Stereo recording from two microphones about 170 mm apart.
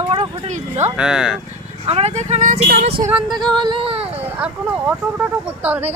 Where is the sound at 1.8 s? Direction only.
40° right (ahead or behind).